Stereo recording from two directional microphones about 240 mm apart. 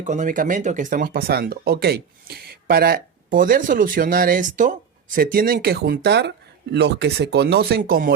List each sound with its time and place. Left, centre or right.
0.0 s speech: right